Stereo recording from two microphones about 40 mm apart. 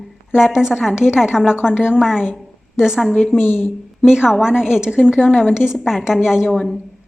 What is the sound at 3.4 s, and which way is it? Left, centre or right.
Speech, left.